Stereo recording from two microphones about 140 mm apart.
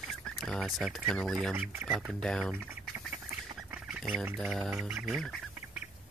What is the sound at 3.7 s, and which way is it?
Duck, 10° right (ahead or behind).